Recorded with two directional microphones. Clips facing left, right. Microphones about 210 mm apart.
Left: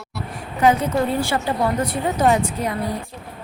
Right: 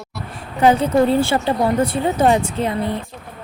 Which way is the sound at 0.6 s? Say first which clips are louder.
Right 4 dB; 30° right (ahead or behind).